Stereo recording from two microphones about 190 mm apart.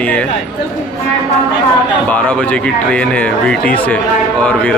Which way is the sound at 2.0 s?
10° left (ahead or behind).